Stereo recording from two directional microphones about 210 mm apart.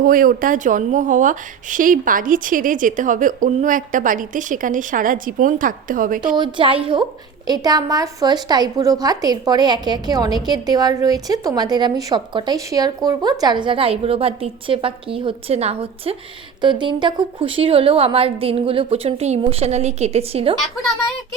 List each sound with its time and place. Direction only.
0.0 s speech: 40° right (ahead or behind)
6.3 s a woman's voice: 20° right (ahead or behind)